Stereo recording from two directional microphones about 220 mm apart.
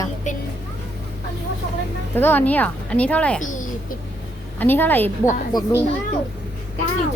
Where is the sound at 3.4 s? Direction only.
35° left (ahead or behind).